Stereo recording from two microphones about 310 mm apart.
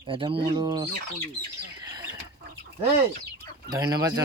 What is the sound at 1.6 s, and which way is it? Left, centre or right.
Bird, centre.